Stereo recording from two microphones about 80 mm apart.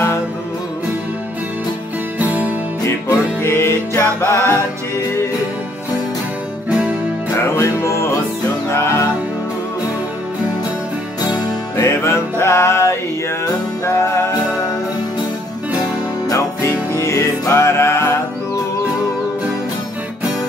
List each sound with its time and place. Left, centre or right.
2.1 s music: centre
2.8 s music: left
7.3 s music: left
11.7 s music: left
16.3 s music: left